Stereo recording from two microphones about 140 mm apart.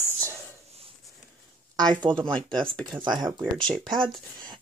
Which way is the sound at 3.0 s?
30° right (ahead or behind).